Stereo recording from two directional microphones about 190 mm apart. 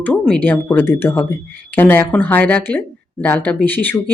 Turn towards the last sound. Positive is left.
turn(degrees=10)  # may be behind; listen again after turning